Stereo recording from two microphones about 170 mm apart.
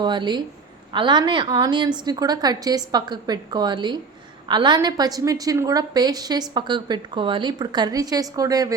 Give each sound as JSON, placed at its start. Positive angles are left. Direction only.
{"t": 0.0, "sound": "a woman's voice", "side_deg": -25}